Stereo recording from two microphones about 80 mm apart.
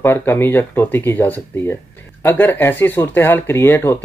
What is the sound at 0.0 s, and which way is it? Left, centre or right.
Speech, left.